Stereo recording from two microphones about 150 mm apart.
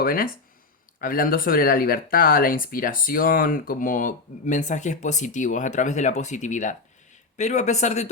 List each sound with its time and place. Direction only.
0.0 s speech: 75° left (ahead or behind); by 8.1 s 50° left (ahead or behind)